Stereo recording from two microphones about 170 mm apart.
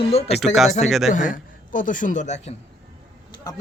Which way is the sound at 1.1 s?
50° left (ahead or behind).